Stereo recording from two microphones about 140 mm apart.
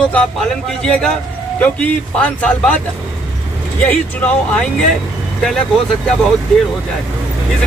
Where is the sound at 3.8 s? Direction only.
10° left (ahead or behind).